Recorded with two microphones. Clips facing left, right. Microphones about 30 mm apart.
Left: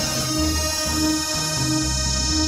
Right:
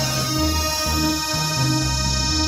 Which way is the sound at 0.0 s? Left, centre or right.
Centre.